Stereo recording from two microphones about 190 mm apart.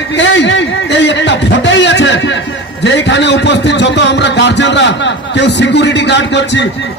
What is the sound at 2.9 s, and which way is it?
A man's voice, 70° left (ahead or behind).